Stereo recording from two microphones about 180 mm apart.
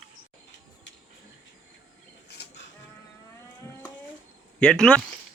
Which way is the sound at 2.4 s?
65° left (ahead or behind).